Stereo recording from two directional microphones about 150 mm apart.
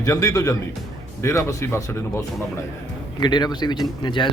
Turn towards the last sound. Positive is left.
turn(degrees=30)  # may be behind; listen again after turning